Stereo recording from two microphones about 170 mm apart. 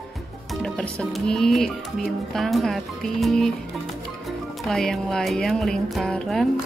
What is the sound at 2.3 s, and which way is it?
Speech, centre (ahead or behind).